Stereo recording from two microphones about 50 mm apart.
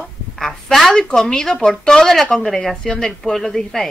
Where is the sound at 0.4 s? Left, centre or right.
Centre.